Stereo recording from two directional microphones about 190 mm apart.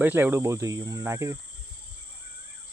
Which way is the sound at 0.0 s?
10° right (ahead or behind).